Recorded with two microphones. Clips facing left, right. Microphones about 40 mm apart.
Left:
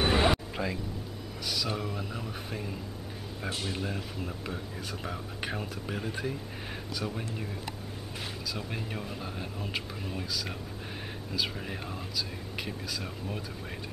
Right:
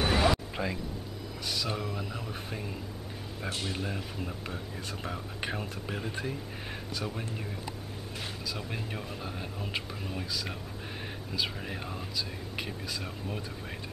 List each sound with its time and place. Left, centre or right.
0.0 s a sound: centre
0.6 s speech: centre
8.5 s speech: centre